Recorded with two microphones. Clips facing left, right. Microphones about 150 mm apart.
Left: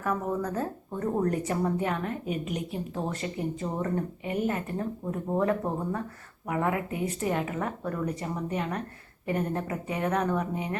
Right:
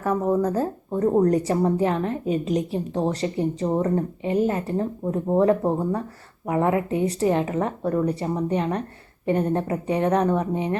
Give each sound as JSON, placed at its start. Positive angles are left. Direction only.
{"t": 0.0, "sound": "speech", "side_deg": -30}